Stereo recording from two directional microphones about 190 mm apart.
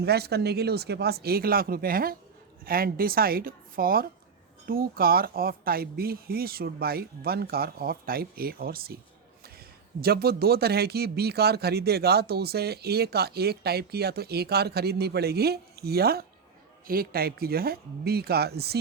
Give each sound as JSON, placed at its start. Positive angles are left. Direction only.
{"t": 0.0, "sound": "speech", "side_deg": -60}
{"t": 10.0, "sound": "speech", "side_deg": -55}